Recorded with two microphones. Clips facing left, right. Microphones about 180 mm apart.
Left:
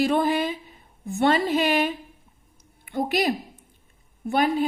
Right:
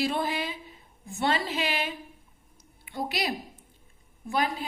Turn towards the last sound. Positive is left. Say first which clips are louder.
# left 7 dB
turn(degrees=60)  # may be behind; listen again after turning